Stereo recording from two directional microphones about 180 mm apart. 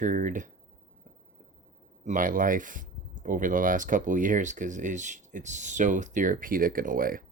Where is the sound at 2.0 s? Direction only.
50° right (ahead or behind).